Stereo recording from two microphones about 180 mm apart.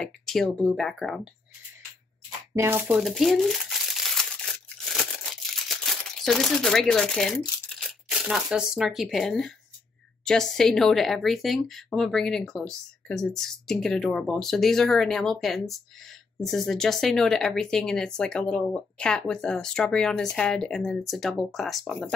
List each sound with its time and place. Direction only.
0.0 s speech: centre (ahead or behind)
2.5 s speech: 15° right (ahead or behind)
3.0 s crumpling: centre (ahead or behind)
10.2 s speech: 5° left (ahead or behind)